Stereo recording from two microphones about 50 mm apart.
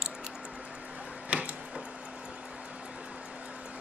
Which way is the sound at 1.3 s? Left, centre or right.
Right.